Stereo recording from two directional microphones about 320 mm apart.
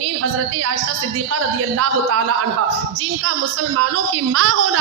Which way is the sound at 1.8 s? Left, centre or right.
Right.